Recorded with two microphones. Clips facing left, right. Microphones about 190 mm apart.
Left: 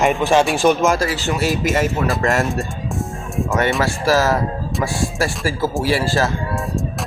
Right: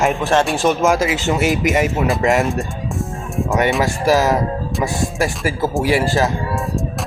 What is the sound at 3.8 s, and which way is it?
Speech, 15° right (ahead or behind).